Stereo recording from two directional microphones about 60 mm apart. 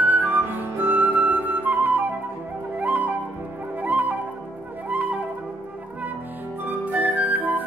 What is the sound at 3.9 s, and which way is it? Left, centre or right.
Music, right.